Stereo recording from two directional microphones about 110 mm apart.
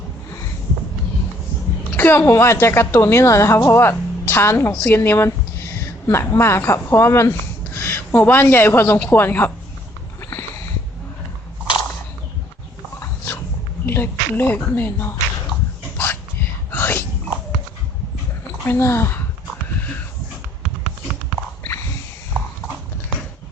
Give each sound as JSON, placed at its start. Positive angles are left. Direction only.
{"t": 2.0, "sound": "a woman's voice", "side_deg": 20}
{"t": 13.0, "sound": "a sound", "side_deg": 20}
{"t": 13.8, "sound": "a woman's voice", "side_deg": 20}
{"t": 16.7, "sound": "dog", "side_deg": 20}
{"t": 18.6, "sound": "speech", "side_deg": 25}